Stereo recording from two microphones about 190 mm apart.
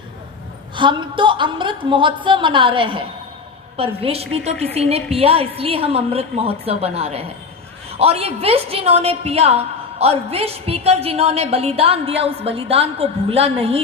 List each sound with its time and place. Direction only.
0.8 s a woman's voice: 25° right (ahead or behind)